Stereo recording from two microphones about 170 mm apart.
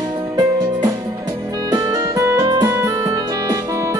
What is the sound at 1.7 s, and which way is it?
Music, 20° right (ahead or behind).